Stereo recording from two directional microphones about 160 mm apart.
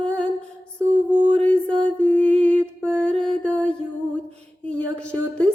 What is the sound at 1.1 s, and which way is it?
Music, 30° right (ahead or behind).